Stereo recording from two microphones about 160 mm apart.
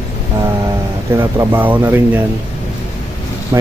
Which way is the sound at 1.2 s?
15° right (ahead or behind).